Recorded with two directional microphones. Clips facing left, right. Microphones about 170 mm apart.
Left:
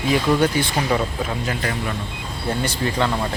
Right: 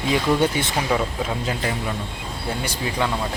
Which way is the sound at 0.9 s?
Centre (ahead or behind).